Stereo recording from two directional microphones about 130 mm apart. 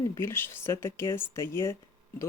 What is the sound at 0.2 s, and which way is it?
Speech, 20° left (ahead or behind).